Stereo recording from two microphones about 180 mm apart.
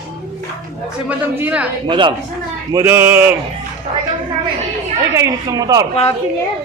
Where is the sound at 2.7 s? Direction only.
15° right (ahead or behind).